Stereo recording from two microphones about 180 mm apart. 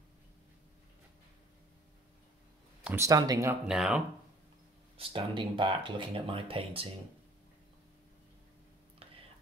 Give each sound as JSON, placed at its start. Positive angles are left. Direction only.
{"t": 2.8, "sound": "speech", "side_deg": -15}
{"t": 3.6, "sound": "speech", "side_deg": -5}
{"t": 4.9, "sound": "speech", "side_deg": -30}
{"t": 9.0, "sound": "whispering", "side_deg": -30}